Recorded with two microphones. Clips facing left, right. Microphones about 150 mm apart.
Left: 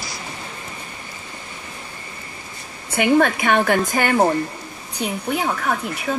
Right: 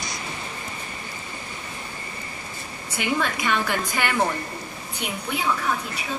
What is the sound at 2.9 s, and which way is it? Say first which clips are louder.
A woman's voice: left 9 dB; 55° left (ahead or behind).